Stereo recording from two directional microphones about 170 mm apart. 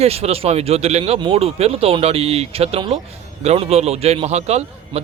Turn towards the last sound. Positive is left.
turn(degrees=-40)  # may be behind; listen again after turning